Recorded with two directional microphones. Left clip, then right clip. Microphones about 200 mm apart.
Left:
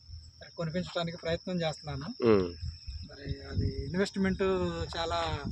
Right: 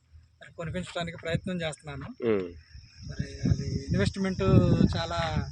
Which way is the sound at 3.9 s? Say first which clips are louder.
Right 1 dB; 45° right (ahead or behind).